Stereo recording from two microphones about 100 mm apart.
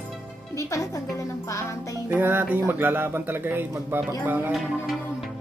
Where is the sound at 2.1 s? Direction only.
20° right (ahead or behind).